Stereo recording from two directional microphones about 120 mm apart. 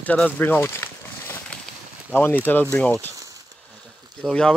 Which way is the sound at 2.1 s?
20° left (ahead or behind).